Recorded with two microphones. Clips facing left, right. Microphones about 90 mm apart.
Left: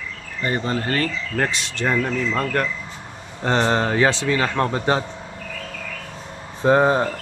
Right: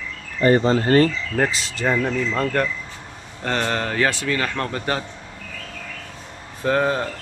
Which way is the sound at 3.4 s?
20° left (ahead or behind).